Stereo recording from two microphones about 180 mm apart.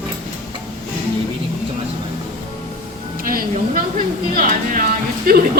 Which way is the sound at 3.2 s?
50° right (ahead or behind).